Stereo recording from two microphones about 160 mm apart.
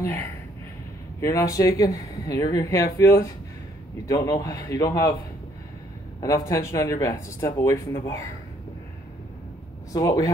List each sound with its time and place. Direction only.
0.0 s speech: 15° left (ahead or behind)
6.2 s speech: 20° left (ahead or behind)
9.9 s speech: 20° left (ahead or behind)